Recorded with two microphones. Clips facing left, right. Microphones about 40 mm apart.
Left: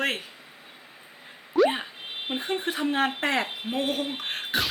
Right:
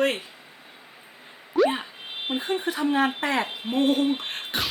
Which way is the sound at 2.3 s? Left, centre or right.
Left.